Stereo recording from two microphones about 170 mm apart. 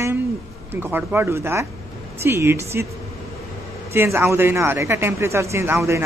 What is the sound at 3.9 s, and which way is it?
Speech, 15° right (ahead or behind).